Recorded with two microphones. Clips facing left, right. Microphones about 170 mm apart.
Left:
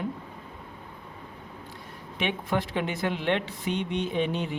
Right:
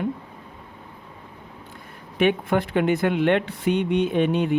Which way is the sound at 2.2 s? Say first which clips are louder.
Right 8 dB; 55° right (ahead or behind).